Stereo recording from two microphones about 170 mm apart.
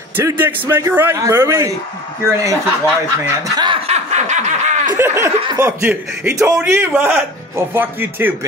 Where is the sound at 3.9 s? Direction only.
40° right (ahead or behind).